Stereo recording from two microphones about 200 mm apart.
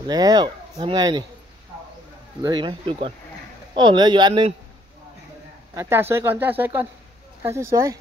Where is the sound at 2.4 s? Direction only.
20° right (ahead or behind).